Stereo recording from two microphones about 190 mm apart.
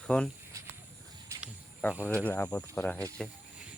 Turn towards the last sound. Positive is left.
turn(degrees=5)  # may be behind; listen again after turning